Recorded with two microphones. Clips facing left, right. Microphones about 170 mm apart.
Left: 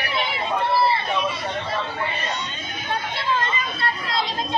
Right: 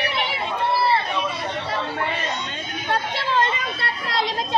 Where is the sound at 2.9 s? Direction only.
75° right (ahead or behind).